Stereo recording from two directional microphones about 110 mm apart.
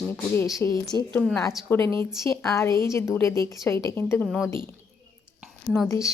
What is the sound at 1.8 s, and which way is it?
Speech, 50° right (ahead or behind).